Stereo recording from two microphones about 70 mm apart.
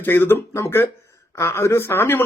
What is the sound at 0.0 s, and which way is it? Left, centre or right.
Speech, left.